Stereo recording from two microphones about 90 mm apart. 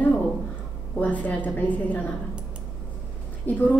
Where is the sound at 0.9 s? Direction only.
15° left (ahead or behind).